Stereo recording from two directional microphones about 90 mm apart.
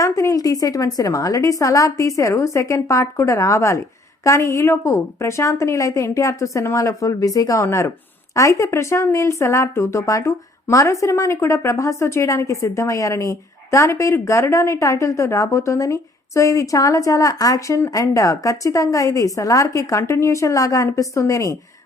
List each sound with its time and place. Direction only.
0.0 s speech: 35° left (ahead or behind)
17.7 s speech: 35° left (ahead or behind)